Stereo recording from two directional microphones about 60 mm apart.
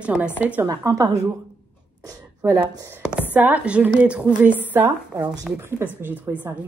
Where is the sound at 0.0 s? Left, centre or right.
Centre.